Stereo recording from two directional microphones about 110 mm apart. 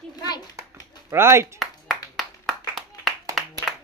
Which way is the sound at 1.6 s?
Centre (ahead or behind).